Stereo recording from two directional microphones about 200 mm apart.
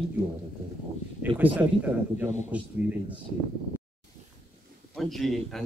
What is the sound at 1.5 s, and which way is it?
Speech, 10° right (ahead or behind).